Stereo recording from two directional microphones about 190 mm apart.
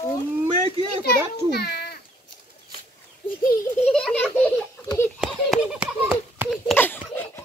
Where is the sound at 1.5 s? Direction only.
60° left (ahead or behind).